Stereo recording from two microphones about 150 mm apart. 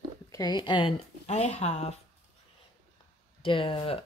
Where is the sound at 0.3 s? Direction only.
25° left (ahead or behind).